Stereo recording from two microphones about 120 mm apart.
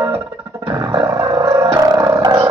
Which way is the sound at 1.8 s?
35° right (ahead or behind).